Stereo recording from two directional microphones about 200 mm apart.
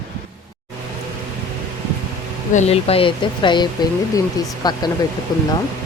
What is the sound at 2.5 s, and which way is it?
Speech, 35° left (ahead or behind).